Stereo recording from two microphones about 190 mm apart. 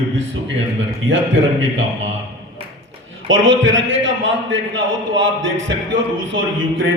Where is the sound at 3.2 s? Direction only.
80° right.